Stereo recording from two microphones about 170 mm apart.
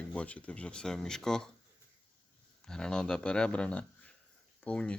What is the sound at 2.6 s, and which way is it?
Speech, 5° left (ahead or behind).